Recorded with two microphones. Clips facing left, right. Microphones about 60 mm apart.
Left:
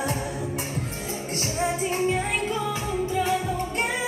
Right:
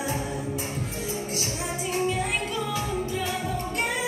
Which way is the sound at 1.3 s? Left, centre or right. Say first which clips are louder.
Left 4 dB; left.